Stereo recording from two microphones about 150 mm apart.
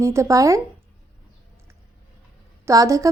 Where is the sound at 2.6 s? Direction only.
20° right (ahead or behind).